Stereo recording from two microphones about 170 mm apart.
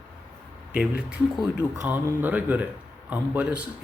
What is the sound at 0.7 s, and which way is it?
Speech, 10° right (ahead or behind).